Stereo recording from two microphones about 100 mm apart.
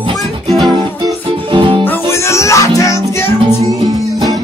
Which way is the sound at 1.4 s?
55° right (ahead or behind).